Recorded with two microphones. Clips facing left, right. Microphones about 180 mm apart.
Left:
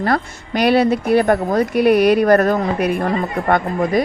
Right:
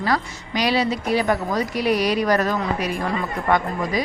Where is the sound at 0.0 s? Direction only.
55° left (ahead or behind).